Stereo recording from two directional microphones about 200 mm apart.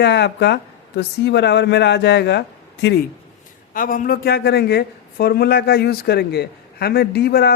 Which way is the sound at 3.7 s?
45° left (ahead or behind).